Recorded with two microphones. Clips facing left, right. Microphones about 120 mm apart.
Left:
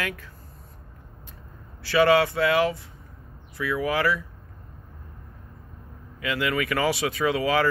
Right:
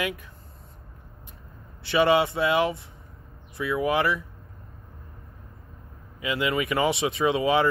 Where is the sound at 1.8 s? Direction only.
20° right (ahead or behind).